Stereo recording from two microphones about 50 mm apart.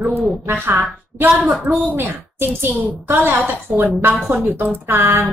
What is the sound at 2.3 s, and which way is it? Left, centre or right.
Speech, right.